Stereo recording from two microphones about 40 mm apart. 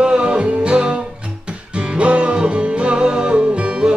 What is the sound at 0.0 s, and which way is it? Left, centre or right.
Music, right.